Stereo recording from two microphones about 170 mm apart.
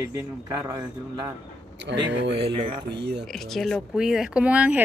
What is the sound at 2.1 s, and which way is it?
Speech, 85° right.